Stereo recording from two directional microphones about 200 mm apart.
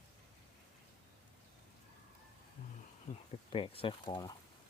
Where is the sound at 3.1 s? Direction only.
25° left (ahead or behind).